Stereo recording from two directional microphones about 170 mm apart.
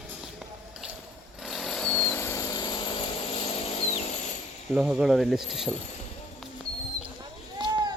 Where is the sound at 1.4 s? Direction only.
Centre (ahead or behind); by 4.1 s 40° left (ahead or behind).